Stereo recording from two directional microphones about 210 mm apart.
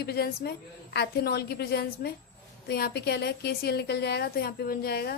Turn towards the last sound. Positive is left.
turn(degrees=50)  # may be behind; listen again after turning